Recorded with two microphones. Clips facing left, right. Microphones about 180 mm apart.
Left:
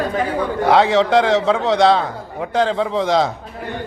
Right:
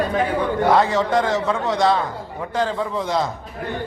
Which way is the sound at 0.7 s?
75° left (ahead or behind).